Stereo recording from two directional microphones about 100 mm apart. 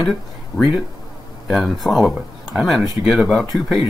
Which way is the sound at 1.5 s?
Centre (ahead or behind).